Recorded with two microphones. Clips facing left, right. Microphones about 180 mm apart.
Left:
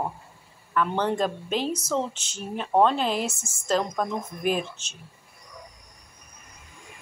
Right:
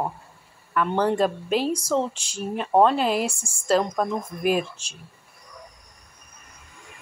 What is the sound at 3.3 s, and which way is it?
Speech, 30° right (ahead or behind).